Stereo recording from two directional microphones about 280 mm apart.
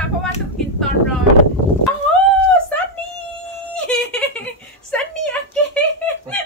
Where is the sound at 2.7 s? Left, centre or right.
Centre.